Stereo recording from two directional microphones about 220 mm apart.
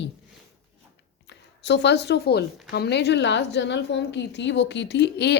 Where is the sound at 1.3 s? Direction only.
50° left (ahead or behind).